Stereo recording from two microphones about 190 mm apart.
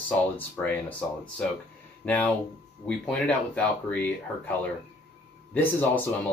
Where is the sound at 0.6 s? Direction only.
10° left (ahead or behind).